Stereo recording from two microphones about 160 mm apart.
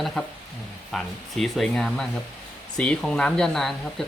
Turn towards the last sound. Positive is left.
turn(degrees=5)  # may be behind; listen again after turning